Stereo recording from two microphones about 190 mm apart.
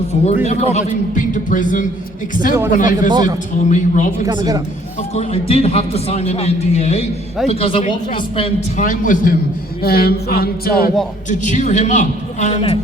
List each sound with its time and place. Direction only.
0.4 s a man's voice: 35° left (ahead or behind)
3.1 s speech: 25° right (ahead or behind)
3.7 s a man's voice: 40° left (ahead or behind)
4.3 s speech: 20° right (ahead or behind)
5.1 s a man's voice: 30° left (ahead or behind)
8.8 s a man's voice: 45° left (ahead or behind)
9.8 s a sound: 55° left (ahead or behind)
11.3 s a man's voice: 40° left (ahead or behind)